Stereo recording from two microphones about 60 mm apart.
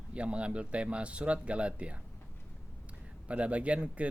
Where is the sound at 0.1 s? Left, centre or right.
Centre.